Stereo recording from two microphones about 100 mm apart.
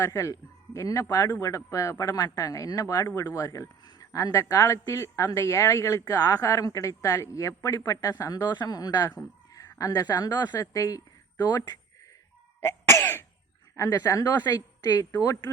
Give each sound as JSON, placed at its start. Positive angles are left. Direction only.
{"t": 0.0, "sound": "a woman's voice", "side_deg": 30}
{"t": 9.6, "sound": "a sound", "side_deg": 35}
{"t": 10.2, "sound": "a woman's voice", "side_deg": 40}
{"t": 12.5, "sound": "cough", "side_deg": 25}
{"t": 13.7, "sound": "a woman's voice", "side_deg": 30}